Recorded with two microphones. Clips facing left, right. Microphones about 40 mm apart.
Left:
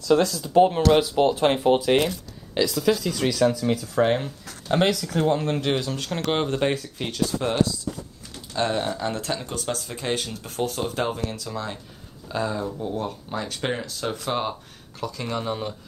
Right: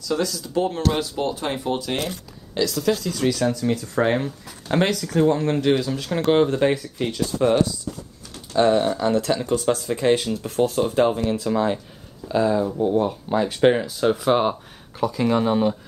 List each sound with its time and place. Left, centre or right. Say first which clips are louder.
0.1 s speech: left 5 dB; left
2.5 s speech: even; centre
6.3 s speech: right 5 dB; centre
8.5 s speech: right 7 dB; centre
9.8 s speech: right 8 dB; centre
10.8 s speech: right 7 dB; centre
11.2 s speech: right 9 dB; right
12.3 s speech: right 7 dB; centre